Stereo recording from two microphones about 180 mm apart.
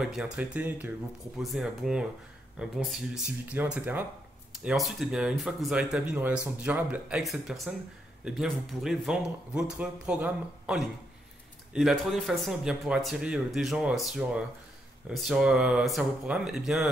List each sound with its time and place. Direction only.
0.0 s speech: 5° right (ahead or behind)